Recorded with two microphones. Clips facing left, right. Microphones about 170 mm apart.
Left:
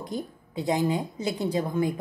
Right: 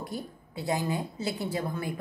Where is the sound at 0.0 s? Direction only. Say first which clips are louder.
Left 4 dB; 20° left (ahead or behind).